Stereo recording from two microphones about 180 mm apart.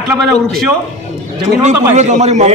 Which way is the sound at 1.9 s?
40° right (ahead or behind).